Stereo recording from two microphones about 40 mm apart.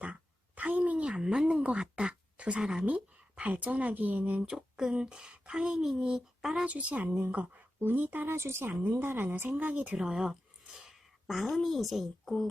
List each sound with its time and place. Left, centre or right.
0.0 s a sound: right
1.5 s speech: right
1.8 s a sound: right
2.6 s a woman's voice: centre
2.8 s speech: right
4.5 s speech: centre
4.9 s a sound: right
5.7 s speech: centre
6.7 s speech: right
7.8 s speech: right
8.3 s speech: right
8.8 s speech: right
9.0 s speech: right
10.0 s a woman's voice: centre